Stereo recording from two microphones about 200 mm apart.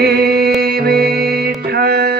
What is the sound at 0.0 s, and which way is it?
Music, 50° right (ahead or behind).